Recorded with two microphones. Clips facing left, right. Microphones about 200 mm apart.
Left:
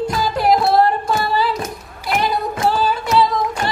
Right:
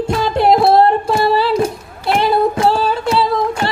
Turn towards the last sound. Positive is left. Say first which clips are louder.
# right 1 dB
turn(degrees=-30)  # may be behind; listen again after turning